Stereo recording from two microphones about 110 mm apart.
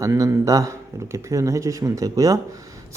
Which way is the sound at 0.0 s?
30° right (ahead or behind).